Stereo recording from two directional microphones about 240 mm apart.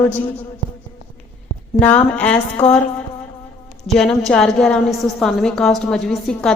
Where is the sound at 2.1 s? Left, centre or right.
Centre.